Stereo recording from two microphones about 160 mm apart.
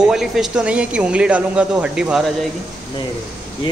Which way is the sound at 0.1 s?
5° right (ahead or behind).